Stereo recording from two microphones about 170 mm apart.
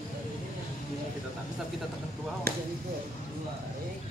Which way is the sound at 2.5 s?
65° right (ahead or behind).